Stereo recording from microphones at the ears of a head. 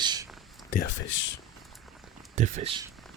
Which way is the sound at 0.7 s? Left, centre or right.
Left.